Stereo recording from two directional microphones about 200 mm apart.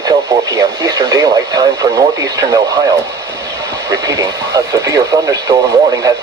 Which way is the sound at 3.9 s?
15° right (ahead or behind).